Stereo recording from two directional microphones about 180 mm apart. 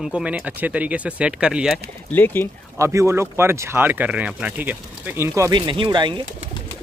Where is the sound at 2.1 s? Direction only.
10° left (ahead or behind).